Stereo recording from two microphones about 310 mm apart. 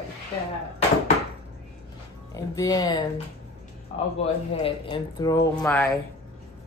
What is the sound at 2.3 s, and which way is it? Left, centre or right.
Speech, centre.